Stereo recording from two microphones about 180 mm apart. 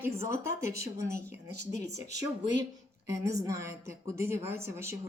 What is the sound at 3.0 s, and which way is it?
A woman's voice, 15° right (ahead or behind).